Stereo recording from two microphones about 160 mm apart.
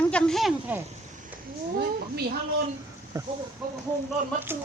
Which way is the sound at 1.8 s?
85° right.